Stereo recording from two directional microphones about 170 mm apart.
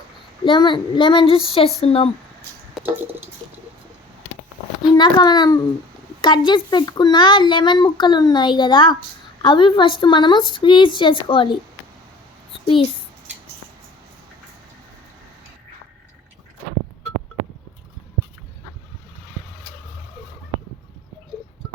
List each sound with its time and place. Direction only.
0.4 s a child's voice: 30° left (ahead or behind)
2.8 s a sound: centre (ahead or behind)
4.9 s a child's voice: 30° left (ahead or behind)